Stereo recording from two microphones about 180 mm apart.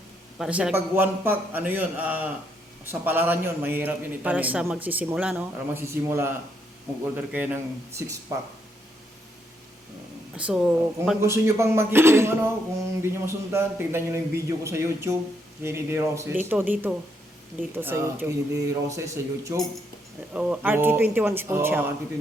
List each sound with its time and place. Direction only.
0.3 s a man's voice: 5° right (ahead or behind)
7.3 s a man's voice: 10° right (ahead or behind)
10.3 s speech: 5° right (ahead or behind)
11.2 s a man's voice: 15° right (ahead or behind)